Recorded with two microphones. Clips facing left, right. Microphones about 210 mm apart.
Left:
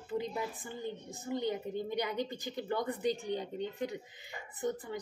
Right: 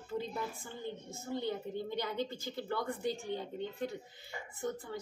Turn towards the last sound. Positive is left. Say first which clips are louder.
# left 3 dB
turn(degrees=15)  # may be behind; listen again after turning